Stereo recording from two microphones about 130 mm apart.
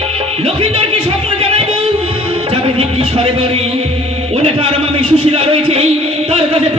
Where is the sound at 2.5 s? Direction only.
45° right (ahead or behind).